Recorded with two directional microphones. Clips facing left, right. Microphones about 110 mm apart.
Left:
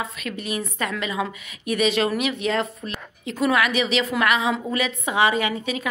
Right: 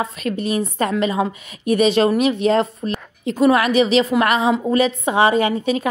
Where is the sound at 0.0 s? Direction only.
35° right (ahead or behind).